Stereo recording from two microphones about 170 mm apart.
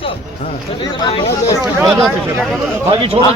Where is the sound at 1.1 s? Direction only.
35° left (ahead or behind).